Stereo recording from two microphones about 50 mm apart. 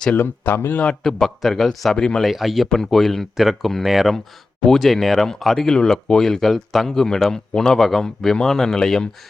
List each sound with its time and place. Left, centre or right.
0.1 s speech: left
1.0 s a man's voice: centre
3.3 s a man's voice: centre